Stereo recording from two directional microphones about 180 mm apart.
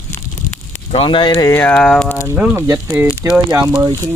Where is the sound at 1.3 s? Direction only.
15° left (ahead or behind).